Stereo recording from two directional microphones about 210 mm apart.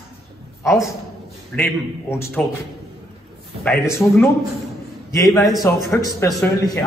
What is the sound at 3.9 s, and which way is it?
A man's voice, 15° left (ahead or behind).